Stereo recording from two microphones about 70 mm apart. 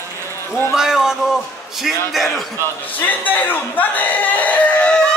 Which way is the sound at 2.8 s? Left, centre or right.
Left.